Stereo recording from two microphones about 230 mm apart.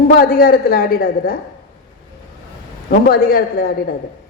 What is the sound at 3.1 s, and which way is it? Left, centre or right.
Speech, left.